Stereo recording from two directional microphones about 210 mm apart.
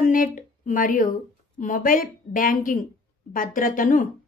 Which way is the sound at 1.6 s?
40° left (ahead or behind).